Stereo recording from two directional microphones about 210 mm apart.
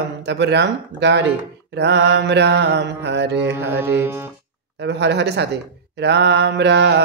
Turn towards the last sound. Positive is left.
turn(degrees=-55)  # may be behind; listen again after turning